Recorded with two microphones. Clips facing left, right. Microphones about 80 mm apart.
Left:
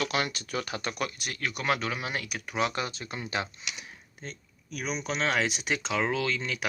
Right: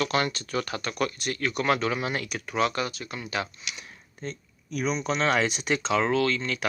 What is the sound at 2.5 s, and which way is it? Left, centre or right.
Speech, centre.